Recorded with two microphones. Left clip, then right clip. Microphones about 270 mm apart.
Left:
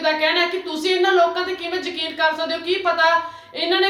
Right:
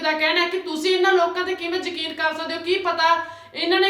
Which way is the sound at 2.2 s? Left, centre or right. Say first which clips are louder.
Left 4 dB; centre.